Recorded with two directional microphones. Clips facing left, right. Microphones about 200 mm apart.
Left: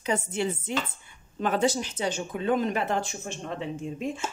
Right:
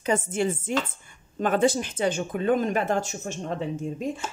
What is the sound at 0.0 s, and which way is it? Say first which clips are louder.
Speech: right 3 dB; 45° right (ahead or behind).